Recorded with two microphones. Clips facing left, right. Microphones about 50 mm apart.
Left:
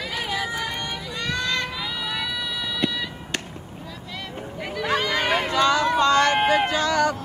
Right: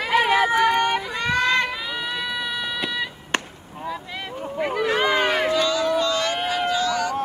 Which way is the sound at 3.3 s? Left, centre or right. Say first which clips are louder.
Right 6 dB; right.